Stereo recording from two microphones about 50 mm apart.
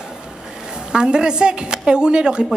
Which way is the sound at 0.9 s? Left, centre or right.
Centre.